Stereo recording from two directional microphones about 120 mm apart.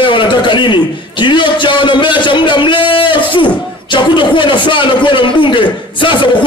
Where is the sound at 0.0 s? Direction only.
40° left (ahead or behind).